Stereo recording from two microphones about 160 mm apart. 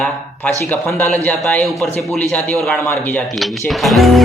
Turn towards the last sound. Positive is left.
turn(degrees=0)  # may be behind; listen again after turning